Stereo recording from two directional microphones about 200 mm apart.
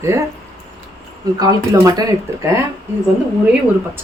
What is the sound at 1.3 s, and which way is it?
Speech, 20° right (ahead or behind).